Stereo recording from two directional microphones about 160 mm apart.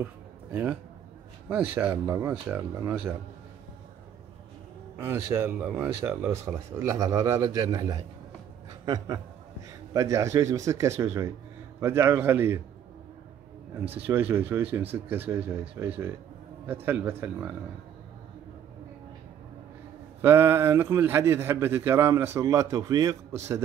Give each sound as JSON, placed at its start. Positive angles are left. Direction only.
{"t": 0.0, "sound": "a sound", "side_deg": -10}
{"t": 1.5, "sound": "a man's voice", "side_deg": -10}
{"t": 5.0, "sound": "a man's voice", "side_deg": -15}
{"t": 14.0, "sound": "a man's voice", "side_deg": -10}
{"t": 20.2, "sound": "a man's voice", "side_deg": -15}